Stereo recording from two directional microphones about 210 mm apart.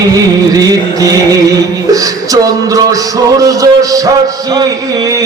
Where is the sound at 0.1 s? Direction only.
15° right (ahead or behind).